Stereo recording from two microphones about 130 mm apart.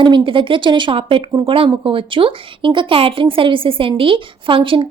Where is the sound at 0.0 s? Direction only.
40° right (ahead or behind).